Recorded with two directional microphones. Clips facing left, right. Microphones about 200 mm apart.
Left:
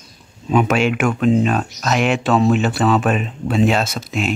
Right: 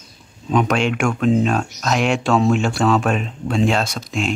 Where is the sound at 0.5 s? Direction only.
5° left (ahead or behind).